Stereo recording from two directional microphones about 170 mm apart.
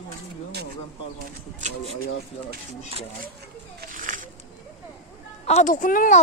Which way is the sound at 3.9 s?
50° right (ahead or behind).